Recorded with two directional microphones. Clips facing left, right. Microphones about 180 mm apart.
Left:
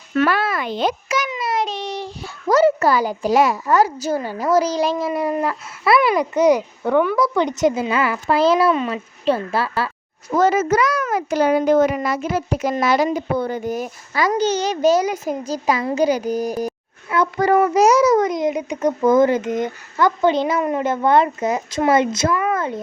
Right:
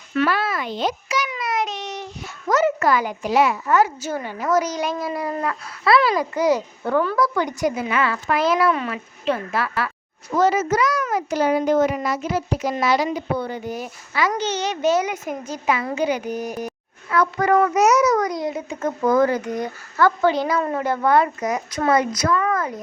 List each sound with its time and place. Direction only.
0.1 s a child's voice: 50° left (ahead or behind)
1.3 s a child's voice: 30° left (ahead or behind)
10.3 s a child's voice: 50° left (ahead or behind); by 22.8 s 25° left (ahead or behind)